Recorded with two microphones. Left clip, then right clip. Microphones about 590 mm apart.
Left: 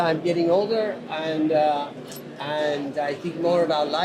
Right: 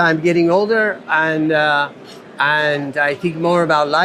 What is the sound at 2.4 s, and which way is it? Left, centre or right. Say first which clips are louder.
A man's voice: right 10 dB; right.